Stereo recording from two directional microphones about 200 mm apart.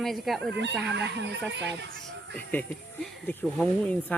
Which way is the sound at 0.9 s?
60° right (ahead or behind).